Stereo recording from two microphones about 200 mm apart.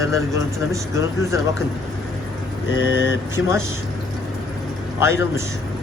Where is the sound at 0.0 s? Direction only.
15° right (ahead or behind).